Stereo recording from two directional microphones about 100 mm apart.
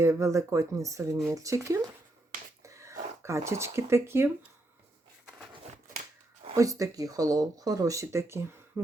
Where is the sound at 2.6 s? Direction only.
30° right (ahead or behind).